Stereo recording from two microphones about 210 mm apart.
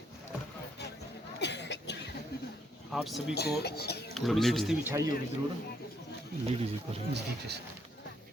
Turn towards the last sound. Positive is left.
turn(degrees=-50)  # may be behind; listen again after turning